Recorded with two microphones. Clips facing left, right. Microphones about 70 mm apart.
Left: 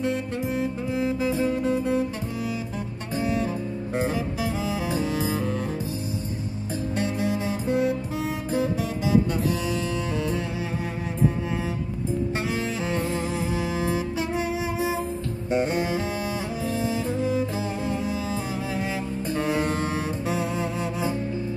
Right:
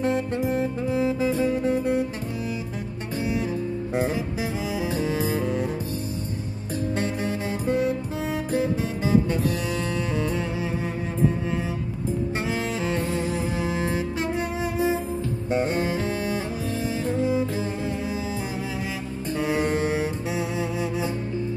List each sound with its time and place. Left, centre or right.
0.0 s music: right
7.0 s music: right
15.5 s music: right
19.4 s music: centre